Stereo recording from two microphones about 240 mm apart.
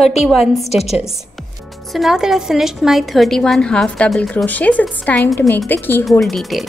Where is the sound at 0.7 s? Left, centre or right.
Left.